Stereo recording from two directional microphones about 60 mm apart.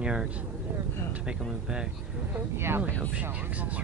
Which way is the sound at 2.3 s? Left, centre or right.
Right.